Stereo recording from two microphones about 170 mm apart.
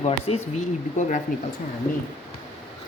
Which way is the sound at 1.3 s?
55° left (ahead or behind).